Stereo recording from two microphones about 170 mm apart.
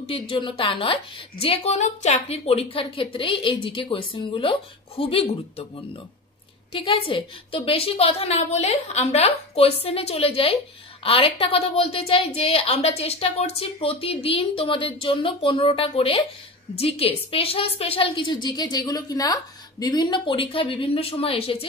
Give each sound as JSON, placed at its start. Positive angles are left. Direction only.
{"t": 0.0, "sound": "a woman's voice", "side_deg": 30}
{"t": 6.7, "sound": "a woman's voice", "side_deg": 35}